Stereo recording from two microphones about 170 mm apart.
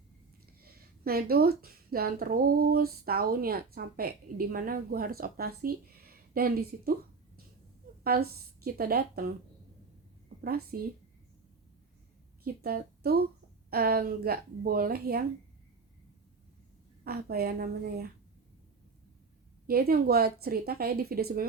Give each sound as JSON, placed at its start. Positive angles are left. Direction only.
{"t": 0.6, "sound": "speech", "side_deg": -60}
{"t": 8.0, "sound": "speech", "side_deg": -60}
{"t": 10.4, "sound": "speech", "side_deg": -60}
{"t": 12.6, "sound": "a woman's voice", "side_deg": -65}
{"t": 17.0, "sound": "speech", "side_deg": -65}
{"t": 19.6, "sound": "speech", "side_deg": -65}